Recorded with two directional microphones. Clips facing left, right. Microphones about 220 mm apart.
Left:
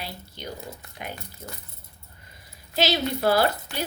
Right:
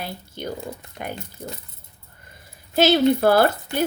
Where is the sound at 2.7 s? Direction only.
50° right (ahead or behind).